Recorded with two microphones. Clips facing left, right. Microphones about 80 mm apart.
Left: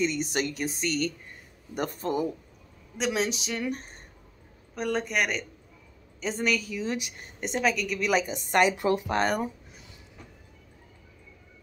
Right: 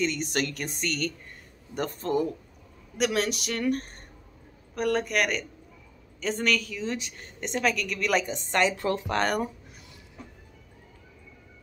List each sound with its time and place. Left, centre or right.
0.0 s a woman's voice: centre
3.0 s a woman's voice: centre
8.5 s speech: centre